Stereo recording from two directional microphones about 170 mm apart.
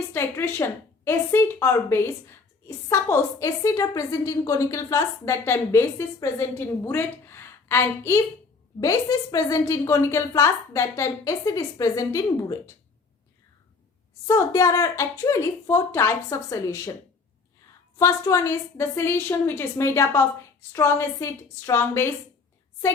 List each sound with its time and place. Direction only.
0.1 s a woman's voice: 15° left (ahead or behind)
14.3 s a woman's voice: 20° left (ahead or behind)
17.9 s a woman's voice: 20° left (ahead or behind)